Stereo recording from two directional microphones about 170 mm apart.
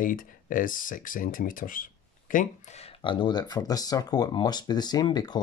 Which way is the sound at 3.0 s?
30° left (ahead or behind).